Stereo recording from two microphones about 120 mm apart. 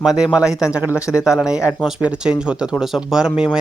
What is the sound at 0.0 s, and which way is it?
Speech, 5° right (ahead or behind).